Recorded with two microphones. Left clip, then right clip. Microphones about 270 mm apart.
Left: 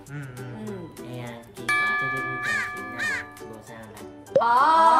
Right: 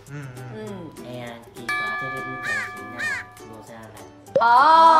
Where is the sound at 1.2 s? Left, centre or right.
Centre.